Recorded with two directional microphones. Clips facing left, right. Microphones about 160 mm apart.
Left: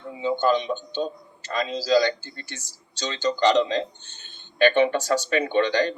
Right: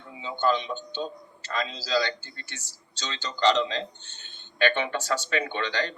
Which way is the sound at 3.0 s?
35° left (ahead or behind).